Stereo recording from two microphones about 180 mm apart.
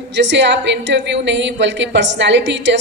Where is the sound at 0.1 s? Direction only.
75° right (ahead or behind).